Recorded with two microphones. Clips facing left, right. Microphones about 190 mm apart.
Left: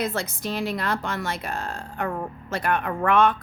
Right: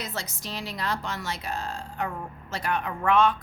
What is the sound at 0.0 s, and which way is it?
A woman's voice, 55° left (ahead or behind).